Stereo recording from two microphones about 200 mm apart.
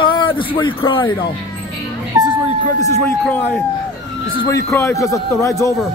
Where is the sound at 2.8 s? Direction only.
15° left (ahead or behind).